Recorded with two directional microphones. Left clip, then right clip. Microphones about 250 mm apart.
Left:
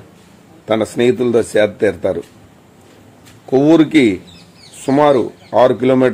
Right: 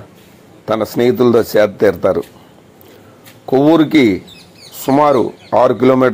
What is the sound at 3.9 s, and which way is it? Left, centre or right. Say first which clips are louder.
Speech: right 1 dB; right.